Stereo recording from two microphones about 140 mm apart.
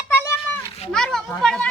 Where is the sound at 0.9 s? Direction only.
5° left (ahead or behind).